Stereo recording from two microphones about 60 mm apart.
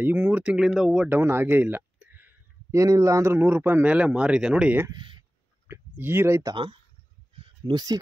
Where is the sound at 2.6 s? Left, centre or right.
Right; by 4.7 s centre.